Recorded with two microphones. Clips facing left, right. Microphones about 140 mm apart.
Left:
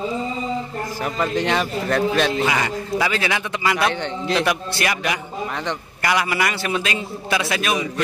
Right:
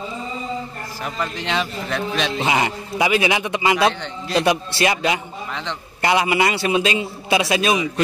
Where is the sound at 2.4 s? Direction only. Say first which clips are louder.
Right 1 dB; 20° right (ahead or behind).